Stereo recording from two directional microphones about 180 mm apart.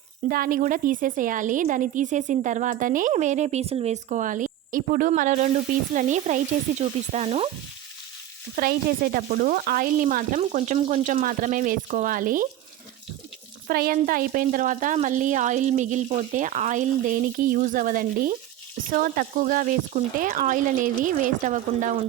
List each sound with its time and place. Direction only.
0.3 s a woman's voice: 50° right (ahead or behind)
5.9 s sizzle: 45° right (ahead or behind)
8.5 s a woman's voice: 55° right (ahead or behind)
13.7 s a woman's voice: 55° right (ahead or behind)